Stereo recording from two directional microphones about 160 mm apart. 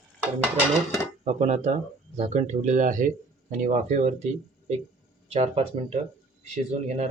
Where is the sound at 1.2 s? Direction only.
45° right (ahead or behind).